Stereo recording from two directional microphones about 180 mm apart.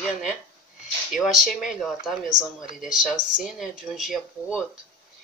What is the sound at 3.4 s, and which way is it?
Speech, centre (ahead or behind).